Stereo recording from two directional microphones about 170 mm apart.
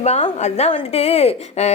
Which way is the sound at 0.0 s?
40° left (ahead or behind).